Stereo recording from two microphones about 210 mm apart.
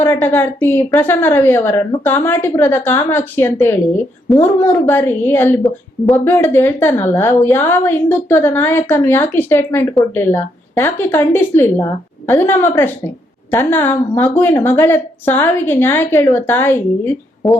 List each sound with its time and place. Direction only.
0.0 s a woman's voice: 10° left (ahead or behind)